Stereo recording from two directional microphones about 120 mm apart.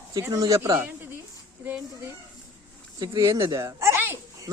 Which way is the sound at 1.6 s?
15° right (ahead or behind).